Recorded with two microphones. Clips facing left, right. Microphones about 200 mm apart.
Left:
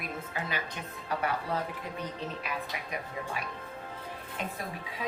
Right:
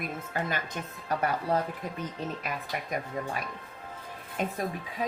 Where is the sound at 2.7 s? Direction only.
50° right (ahead or behind).